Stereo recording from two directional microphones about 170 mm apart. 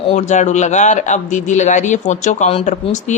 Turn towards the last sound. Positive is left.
turn(degrees=45)  # may be behind; listen again after turning